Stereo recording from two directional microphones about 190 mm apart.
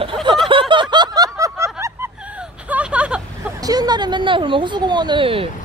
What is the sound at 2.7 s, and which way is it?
Vehicle, 5° right (ahead or behind).